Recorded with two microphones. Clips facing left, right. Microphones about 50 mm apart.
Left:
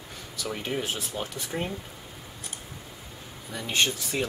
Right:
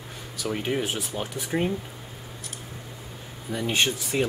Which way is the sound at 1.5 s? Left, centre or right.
Right.